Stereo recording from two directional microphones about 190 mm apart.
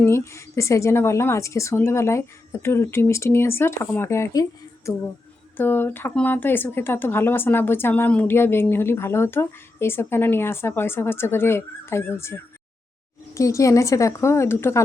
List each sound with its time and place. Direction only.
0.0 s speech: 15° left (ahead or behind)